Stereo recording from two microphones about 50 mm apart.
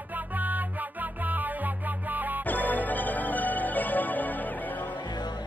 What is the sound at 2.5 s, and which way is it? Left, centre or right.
Music, left.